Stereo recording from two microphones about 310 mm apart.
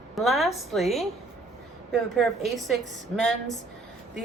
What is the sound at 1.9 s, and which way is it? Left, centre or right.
Speech, centre.